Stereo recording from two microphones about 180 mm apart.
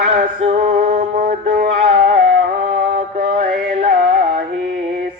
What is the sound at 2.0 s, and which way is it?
Music, 45° right (ahead or behind).